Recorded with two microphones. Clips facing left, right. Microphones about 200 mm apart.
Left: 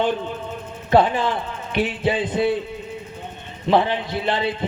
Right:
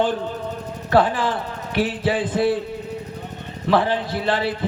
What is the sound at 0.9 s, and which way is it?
A man's voice, 20° left (ahead or behind).